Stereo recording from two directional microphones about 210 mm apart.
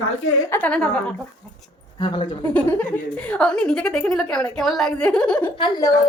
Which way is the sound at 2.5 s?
5° left (ahead or behind).